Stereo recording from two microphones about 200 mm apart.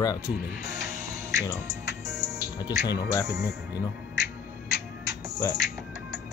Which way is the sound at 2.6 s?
20° left (ahead or behind).